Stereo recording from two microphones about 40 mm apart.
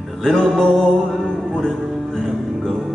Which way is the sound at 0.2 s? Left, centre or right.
Centre.